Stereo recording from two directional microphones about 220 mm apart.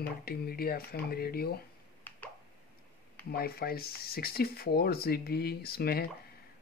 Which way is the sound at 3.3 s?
45° left (ahead or behind).